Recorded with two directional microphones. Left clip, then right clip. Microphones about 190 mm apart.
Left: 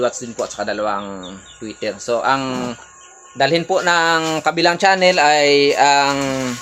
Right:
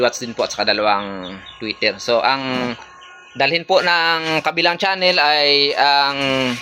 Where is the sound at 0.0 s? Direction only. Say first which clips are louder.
Right 2 dB; 5° right (ahead or behind).